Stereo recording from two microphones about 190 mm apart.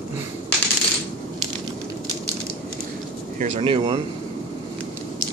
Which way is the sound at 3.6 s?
30° right (ahead or behind).